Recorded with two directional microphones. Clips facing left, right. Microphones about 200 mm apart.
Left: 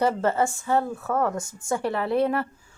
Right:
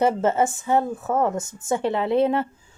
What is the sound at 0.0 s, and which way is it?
A woman's voice, 20° right (ahead or behind).